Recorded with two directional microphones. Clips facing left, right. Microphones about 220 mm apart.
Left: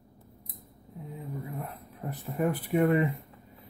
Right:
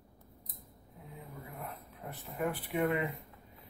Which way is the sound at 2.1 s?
40° left (ahead or behind).